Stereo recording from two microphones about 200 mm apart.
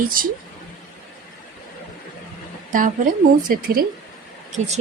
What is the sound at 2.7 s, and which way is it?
A woman's voice, 40° right (ahead or behind).